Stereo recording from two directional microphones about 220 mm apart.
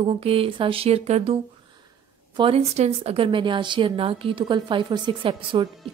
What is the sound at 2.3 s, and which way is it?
A woman's voice, 25° right (ahead or behind).